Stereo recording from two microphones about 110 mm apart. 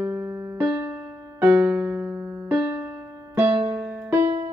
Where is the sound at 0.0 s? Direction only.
15° right (ahead or behind).